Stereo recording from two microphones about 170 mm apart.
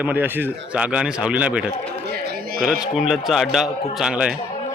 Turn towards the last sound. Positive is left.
turn(degrees=-5)  # may be behind; listen again after turning